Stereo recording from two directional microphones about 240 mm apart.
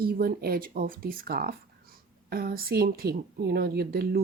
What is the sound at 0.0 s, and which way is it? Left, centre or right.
Speech, right.